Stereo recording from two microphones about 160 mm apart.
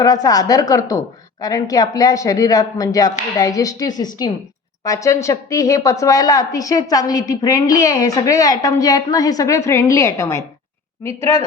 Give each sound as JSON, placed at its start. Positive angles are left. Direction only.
{"t": 0.0, "sound": "a woman's voice", "side_deg": 25}